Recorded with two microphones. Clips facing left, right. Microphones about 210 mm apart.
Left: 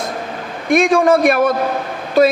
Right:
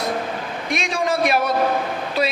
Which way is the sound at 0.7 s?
50° left (ahead or behind).